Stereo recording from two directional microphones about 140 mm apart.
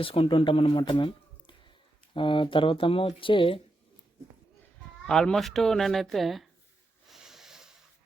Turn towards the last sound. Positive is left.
turn(degrees=-5)  # may be behind; listen again after turning